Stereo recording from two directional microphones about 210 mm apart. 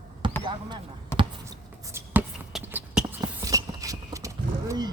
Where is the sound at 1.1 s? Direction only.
10° left (ahead or behind).